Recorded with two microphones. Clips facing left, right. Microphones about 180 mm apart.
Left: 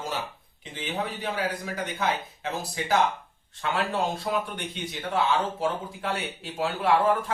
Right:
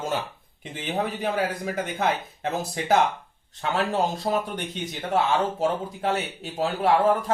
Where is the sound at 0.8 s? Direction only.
45° right (ahead or behind).